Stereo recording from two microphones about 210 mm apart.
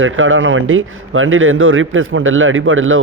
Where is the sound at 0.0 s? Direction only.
70° right (ahead or behind).